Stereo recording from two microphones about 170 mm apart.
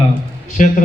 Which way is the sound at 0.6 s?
50° left (ahead or behind).